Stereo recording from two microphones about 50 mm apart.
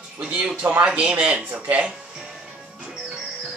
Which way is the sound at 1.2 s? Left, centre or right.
Centre.